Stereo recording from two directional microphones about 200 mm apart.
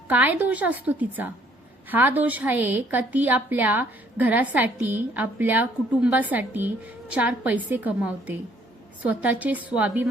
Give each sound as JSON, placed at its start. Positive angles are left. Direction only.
{"t": 0.1, "sound": "a woman's voice", "side_deg": -10}